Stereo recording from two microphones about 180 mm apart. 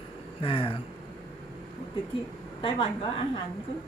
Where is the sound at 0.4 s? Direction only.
30° left (ahead or behind).